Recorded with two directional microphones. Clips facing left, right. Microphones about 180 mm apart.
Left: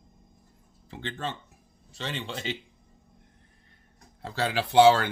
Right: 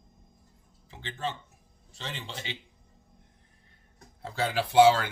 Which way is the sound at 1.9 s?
70° left (ahead or behind).